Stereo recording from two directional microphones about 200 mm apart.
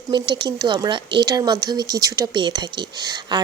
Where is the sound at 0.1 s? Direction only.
20° right (ahead or behind).